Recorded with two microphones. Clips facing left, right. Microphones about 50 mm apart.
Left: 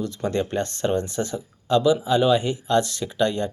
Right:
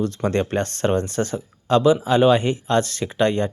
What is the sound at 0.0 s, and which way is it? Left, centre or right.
Speech, right.